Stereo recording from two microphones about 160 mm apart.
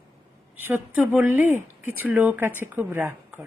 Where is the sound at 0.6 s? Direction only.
15° right (ahead or behind).